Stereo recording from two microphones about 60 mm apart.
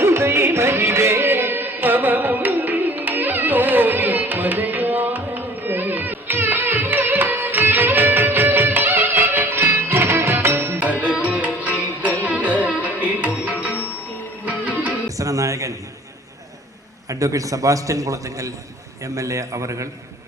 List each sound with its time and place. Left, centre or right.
0.0 s music: right
11.3 s music: right
15.0 s a sound: right
17.1 s a man's voice: right